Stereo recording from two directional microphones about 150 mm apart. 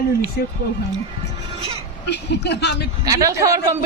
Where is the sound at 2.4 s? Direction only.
90° left.